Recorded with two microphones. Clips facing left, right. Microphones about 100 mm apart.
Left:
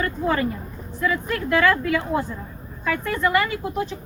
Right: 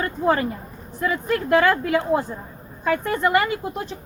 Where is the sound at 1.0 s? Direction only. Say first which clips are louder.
Right 1 dB; 30° right (ahead or behind).